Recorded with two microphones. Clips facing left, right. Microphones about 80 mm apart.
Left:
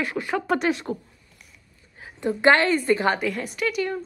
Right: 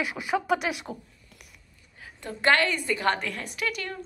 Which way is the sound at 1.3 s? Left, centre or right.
Right.